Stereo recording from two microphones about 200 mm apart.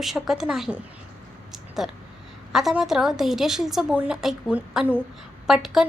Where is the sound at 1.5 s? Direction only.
Centre (ahead or behind).